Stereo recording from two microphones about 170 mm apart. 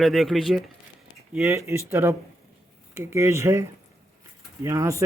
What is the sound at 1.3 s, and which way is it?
Speech, 15° right (ahead or behind).